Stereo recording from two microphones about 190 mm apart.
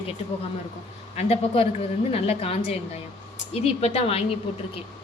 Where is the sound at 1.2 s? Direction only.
30° left (ahead or behind).